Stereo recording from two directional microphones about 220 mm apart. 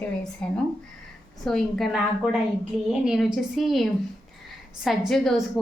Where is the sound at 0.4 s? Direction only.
5° left (ahead or behind).